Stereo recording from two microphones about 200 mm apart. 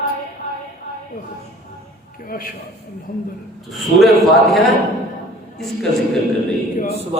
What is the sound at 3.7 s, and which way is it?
Speech, centre (ahead or behind).